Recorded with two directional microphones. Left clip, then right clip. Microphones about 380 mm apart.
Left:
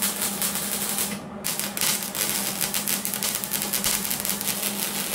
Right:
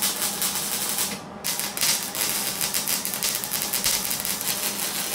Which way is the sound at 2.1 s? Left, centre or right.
Centre.